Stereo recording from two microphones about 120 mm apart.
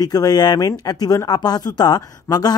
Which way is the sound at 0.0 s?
30° left (ahead or behind).